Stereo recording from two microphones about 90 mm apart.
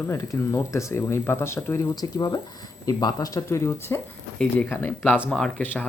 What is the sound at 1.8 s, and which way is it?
Speech, 45° left (ahead or behind).